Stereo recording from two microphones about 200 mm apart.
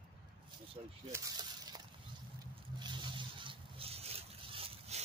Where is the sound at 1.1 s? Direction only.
20° right (ahead or behind).